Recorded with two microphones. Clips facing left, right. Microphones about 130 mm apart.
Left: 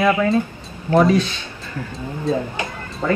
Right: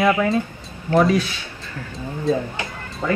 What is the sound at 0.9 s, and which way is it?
Speech, 25° left (ahead or behind).